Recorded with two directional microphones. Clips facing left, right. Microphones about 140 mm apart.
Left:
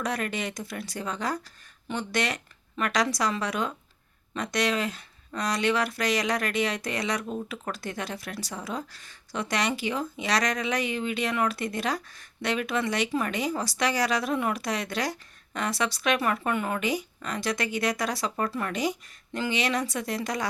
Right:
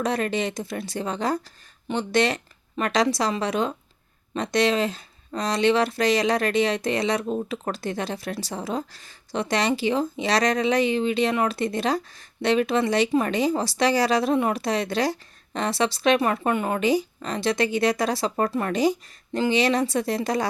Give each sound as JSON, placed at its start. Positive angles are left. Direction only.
{"t": 0.0, "sound": "speech", "side_deg": -30}